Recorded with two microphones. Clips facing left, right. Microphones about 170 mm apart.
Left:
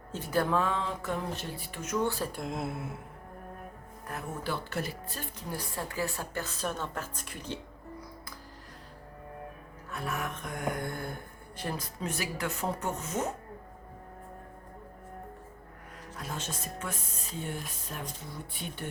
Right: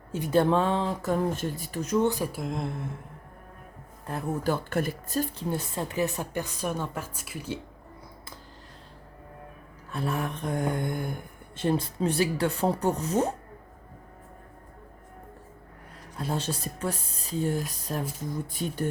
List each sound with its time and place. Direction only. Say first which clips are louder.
0.3 s speech: right 6 dB; 25° right (ahead or behind)
2.0 s a woman's voice: right 5 dB; 15° right (ahead or behind)
2.3 s speech: right 3 dB; centre (ahead or behind)
4.4 s speech: right 7 dB; 50° right (ahead or behind)
5.5 s a woman's voice: right 6 dB; 25° right (ahead or behind)
9.9 s speech: right 5 dB; 30° right (ahead or behind)
10.8 s a woman's voice: right 5 dB; 15° right (ahead or behind); by 13.3 s 35° right (ahead or behind)
16.1 s speech: right 8 dB; 30° right (ahead or behind)